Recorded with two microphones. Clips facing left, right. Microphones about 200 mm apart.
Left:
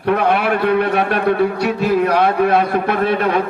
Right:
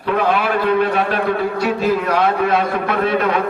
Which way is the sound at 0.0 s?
65° left (ahead or behind).